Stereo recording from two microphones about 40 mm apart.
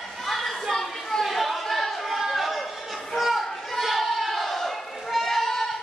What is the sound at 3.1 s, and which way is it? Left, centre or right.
Children playing, centre.